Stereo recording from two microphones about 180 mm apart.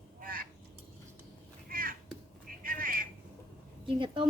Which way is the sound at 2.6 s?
50° right (ahead or behind).